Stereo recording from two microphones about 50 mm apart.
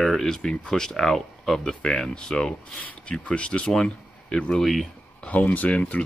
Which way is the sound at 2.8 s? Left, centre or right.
Left.